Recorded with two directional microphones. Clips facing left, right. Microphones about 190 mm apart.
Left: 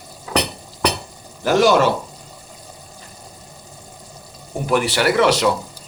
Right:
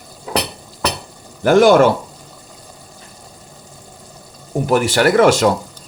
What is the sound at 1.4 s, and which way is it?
Speech, 55° right (ahead or behind).